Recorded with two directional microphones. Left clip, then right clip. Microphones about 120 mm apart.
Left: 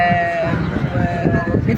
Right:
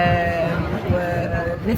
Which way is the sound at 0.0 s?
20° right (ahead or behind).